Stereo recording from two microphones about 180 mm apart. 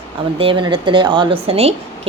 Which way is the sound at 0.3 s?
30° right (ahead or behind).